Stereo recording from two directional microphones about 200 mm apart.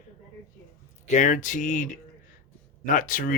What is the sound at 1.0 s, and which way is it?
Speech, 40° left (ahead or behind).